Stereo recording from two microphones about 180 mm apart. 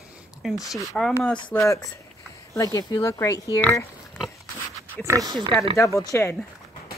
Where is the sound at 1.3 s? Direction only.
25° left (ahead or behind); by 4.2 s 10° left (ahead or behind).